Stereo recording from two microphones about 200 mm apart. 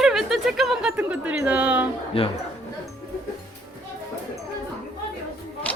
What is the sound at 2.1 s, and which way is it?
Speech, 30° left (ahead or behind).